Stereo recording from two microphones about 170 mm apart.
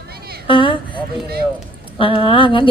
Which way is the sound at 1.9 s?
30° left (ahead or behind).